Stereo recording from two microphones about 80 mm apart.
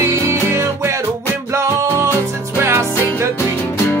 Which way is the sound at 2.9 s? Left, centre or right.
Left.